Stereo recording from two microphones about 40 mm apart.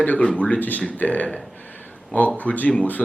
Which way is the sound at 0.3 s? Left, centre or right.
Left.